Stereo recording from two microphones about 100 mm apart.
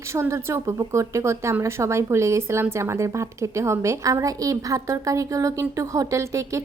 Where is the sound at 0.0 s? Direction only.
30° right (ahead or behind).